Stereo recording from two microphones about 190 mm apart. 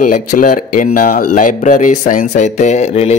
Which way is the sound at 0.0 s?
45° left (ahead or behind).